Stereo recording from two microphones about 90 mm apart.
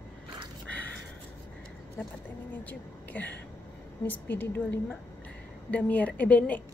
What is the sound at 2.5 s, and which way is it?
A woman's voice, 20° left (ahead or behind).